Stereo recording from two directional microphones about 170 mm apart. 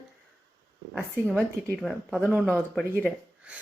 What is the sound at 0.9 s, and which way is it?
A woman's voice, 5° left (ahead or behind).